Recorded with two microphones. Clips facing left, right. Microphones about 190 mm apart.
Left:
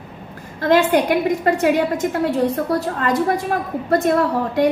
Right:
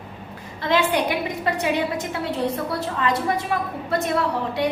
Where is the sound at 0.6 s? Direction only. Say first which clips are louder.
Left 6 dB; 50° left (ahead or behind).